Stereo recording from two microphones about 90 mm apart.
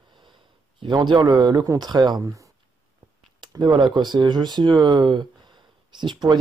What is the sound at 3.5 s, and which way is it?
Speech, 50° right (ahead or behind).